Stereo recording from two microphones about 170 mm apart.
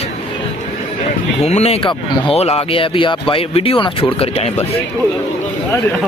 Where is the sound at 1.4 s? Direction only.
40° left (ahead or behind).